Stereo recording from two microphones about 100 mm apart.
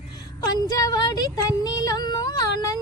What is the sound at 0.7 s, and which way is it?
Music, 40° left (ahead or behind).